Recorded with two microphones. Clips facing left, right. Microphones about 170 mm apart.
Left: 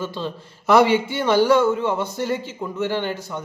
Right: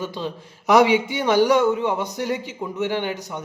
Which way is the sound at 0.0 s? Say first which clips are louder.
Even; 15° right (ahead or behind).